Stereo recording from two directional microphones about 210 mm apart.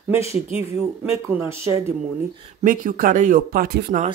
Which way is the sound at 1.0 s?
10° right (ahead or behind).